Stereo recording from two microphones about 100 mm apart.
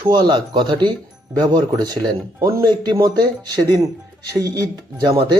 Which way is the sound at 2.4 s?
25° right (ahead or behind).